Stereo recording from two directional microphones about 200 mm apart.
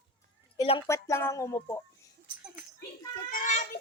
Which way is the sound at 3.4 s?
40° left (ahead or behind).